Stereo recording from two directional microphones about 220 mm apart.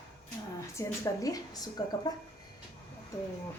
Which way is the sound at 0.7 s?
15° left (ahead or behind).